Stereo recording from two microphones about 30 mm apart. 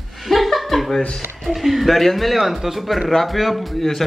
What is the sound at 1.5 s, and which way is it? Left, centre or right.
Speech, centre.